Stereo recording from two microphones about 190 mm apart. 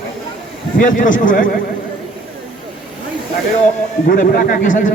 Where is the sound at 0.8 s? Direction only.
45° left (ahead or behind).